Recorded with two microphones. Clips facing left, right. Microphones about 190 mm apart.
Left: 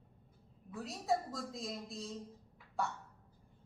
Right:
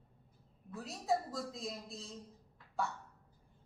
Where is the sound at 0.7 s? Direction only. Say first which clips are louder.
Even; centre (ahead or behind).